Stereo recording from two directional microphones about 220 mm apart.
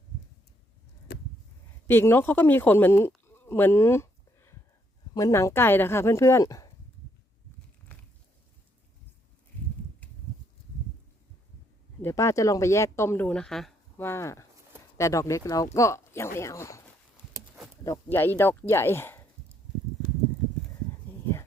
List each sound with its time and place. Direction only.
1.1 s a sound: 45° left (ahead or behind)
1.9 s speech: 10° left (ahead or behind)
12.0 s speech: 15° left (ahead or behind)
17.8 s speech: 10° left (ahead or behind)